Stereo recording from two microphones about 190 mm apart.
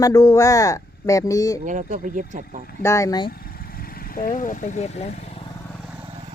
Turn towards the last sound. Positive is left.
turn(degrees=35)  # may be behind; listen again after turning